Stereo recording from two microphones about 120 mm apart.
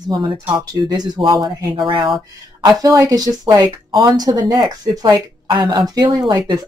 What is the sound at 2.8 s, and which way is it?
Speech, 30° right (ahead or behind).